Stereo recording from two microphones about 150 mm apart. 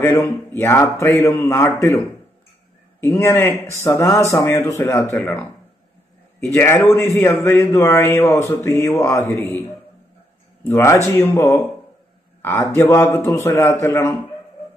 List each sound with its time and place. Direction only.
0.0 s a man's voice: 20° left (ahead or behind)
6.5 s a man's voice: 15° left (ahead or behind)
10.6 s a man's voice: 20° left (ahead or behind)